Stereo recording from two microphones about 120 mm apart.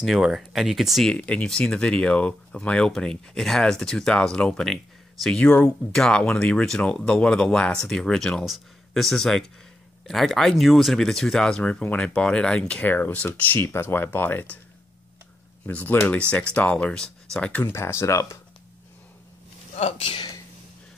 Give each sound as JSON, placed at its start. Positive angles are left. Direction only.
{"t": 0.0, "sound": "speech", "side_deg": 0}
{"t": 1.1, "sound": "speech", "side_deg": 10}
{"t": 15.6, "sound": "speech", "side_deg": 15}
{"t": 19.7, "sound": "speech", "side_deg": 60}